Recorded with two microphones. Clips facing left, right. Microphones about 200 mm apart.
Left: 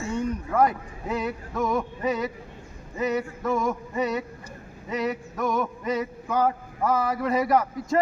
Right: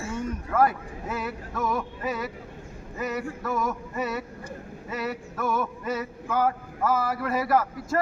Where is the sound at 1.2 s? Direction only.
20° left (ahead or behind).